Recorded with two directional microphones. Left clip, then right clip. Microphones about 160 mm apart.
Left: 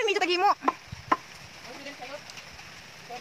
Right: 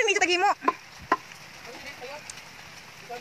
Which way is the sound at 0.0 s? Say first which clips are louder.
Right 2 dB; 15° left (ahead or behind).